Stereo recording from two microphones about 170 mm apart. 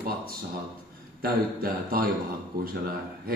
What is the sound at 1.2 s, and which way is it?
Speech, 60° right (ahead or behind).